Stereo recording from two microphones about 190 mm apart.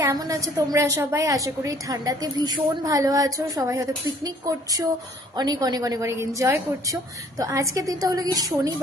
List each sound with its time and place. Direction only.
0.0 s a woman's voice: 15° right (ahead or behind)
5.4 s a woman's voice: 20° right (ahead or behind)